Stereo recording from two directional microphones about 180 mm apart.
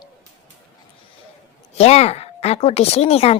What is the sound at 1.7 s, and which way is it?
Speech, 35° left (ahead or behind).